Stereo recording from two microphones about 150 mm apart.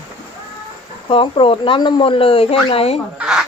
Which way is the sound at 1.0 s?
35° left (ahead or behind).